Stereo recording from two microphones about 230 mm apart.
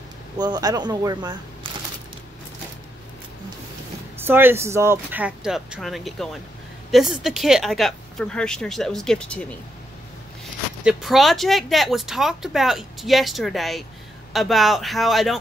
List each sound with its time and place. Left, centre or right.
0.4 s speech: centre
4.2 s speech: centre
10.8 s speech: centre